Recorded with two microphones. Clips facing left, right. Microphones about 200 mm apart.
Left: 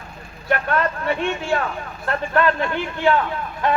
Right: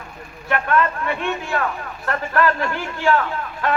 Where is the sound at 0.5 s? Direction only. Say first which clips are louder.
Right 1 dB; 35° left (ahead or behind).